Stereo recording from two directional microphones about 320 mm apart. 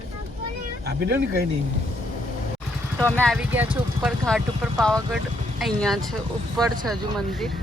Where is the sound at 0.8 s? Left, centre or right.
Right.